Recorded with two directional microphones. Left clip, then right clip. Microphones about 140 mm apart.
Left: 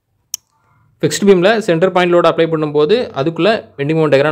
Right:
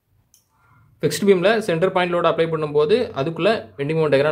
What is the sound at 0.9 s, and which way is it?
Speech, 55° left (ahead or behind).